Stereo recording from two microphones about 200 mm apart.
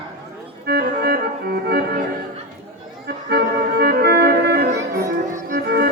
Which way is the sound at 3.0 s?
55° right (ahead or behind).